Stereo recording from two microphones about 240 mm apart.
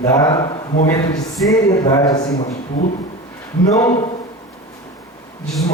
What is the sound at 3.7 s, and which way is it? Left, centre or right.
Speech, centre.